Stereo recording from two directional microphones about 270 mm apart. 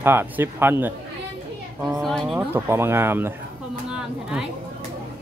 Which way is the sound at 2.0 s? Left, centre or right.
Centre.